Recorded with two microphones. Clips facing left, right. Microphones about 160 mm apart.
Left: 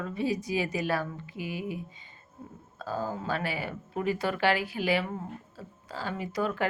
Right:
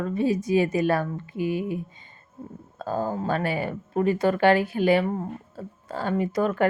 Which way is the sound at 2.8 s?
50° right (ahead or behind).